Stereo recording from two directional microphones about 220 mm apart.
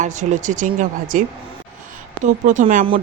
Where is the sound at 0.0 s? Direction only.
35° right (ahead or behind).